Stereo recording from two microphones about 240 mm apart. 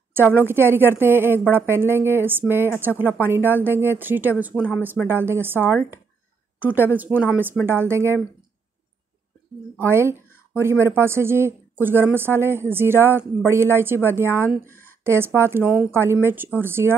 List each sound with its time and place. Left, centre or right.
0.1 s a woman's voice: centre
9.8 s speech: centre